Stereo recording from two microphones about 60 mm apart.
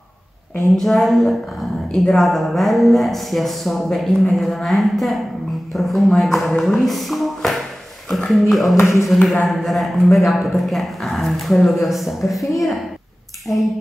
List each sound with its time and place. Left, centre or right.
0.7 s speech: centre
8.7 s speech: left
9.1 s speech: centre
13.5 s a sound: left